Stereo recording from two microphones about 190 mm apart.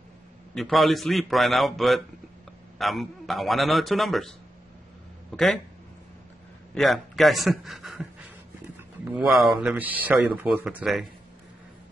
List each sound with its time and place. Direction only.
0.6 s a man's voice: centre (ahead or behind)
5.3 s a man's voice: 5° left (ahead or behind)
6.7 s a man's voice: centre (ahead or behind)